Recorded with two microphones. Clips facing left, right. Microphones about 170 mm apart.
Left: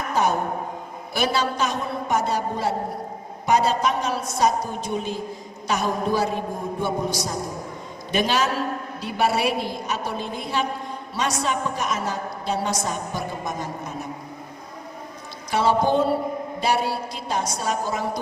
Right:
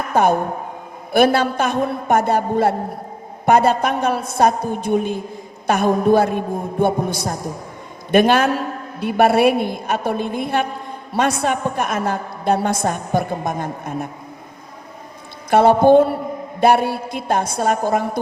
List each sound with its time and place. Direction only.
0.1 s a woman's voice: 55° right (ahead or behind)
15.4 s a woman's voice: 55° right (ahead or behind)